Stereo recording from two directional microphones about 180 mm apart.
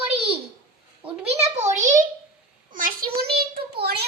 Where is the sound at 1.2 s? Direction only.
35° right (ahead or behind).